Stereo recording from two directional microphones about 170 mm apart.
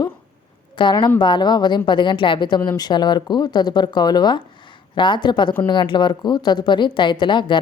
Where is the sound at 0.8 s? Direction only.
25° left (ahead or behind).